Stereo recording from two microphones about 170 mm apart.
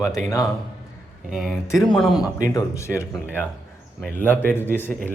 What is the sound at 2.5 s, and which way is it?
A man's voice, 15° left (ahead or behind).